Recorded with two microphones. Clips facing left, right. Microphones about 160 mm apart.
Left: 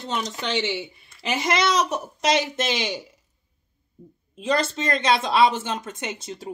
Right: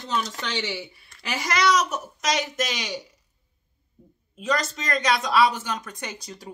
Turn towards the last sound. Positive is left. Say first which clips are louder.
# left 4 dB
turn(degrees=25)  # may be behind; listen again after turning